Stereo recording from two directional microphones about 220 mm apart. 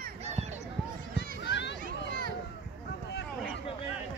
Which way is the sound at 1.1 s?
50° left (ahead or behind).